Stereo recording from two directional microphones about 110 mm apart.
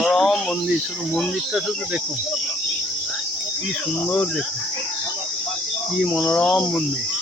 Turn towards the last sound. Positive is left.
turn(degrees=10)  # may be behind; listen again after turning